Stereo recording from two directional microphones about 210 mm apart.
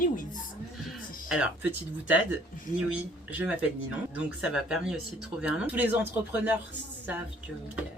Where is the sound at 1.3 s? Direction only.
5° right (ahead or behind).